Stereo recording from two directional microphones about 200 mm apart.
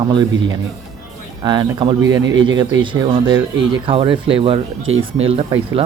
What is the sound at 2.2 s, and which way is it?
Speech, 70° right (ahead or behind).